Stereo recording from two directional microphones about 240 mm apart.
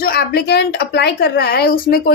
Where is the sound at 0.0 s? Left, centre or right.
Left.